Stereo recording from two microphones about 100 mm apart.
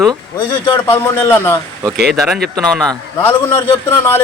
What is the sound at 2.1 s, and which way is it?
Speech, centre (ahead or behind).